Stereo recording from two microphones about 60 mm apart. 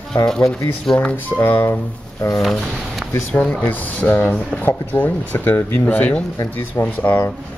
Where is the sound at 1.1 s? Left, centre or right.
Left.